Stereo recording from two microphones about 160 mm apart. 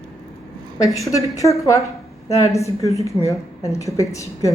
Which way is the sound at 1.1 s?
20° left (ahead or behind).